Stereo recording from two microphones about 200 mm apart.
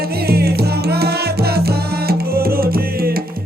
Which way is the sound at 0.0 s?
50° right (ahead or behind).